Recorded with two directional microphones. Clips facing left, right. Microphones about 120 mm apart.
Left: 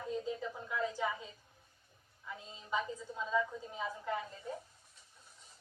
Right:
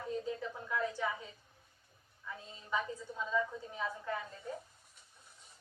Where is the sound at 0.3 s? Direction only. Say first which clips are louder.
Even; 20° left (ahead or behind).